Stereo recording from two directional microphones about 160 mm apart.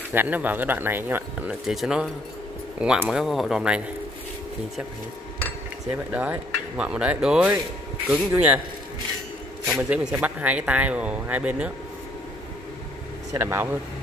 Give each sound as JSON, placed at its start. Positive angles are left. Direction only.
{"t": 0.1, "sound": "speech", "side_deg": -10}
{"t": 6.1, "sound": "speech", "side_deg": -10}
{"t": 9.7, "sound": "speech", "side_deg": -5}
{"t": 13.3, "sound": "speech", "side_deg": -15}